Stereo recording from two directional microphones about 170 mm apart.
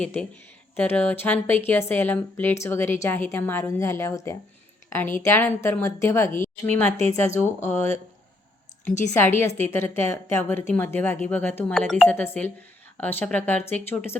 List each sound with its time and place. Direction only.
0.0 s a woman's voice: 5° left (ahead or behind)
9.6 s speech: 15° left (ahead or behind)